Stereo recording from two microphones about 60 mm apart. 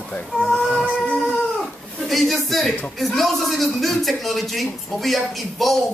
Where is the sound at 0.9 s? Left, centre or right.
Left.